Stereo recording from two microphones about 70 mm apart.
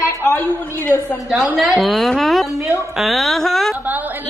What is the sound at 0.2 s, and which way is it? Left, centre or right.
Speech, left.